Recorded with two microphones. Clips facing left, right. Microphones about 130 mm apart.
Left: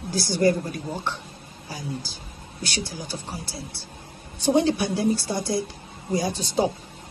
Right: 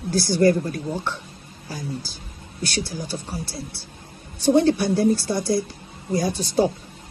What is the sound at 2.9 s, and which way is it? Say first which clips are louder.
Speech: right 4 dB; 45° right (ahead or behind).